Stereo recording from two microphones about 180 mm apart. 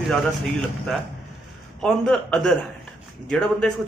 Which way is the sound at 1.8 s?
5° left (ahead or behind).